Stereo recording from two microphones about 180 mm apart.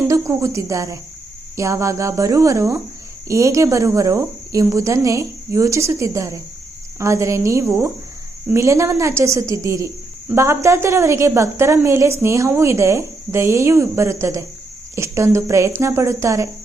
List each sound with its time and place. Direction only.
0.1 s a woman's voice: 15° right (ahead or behind)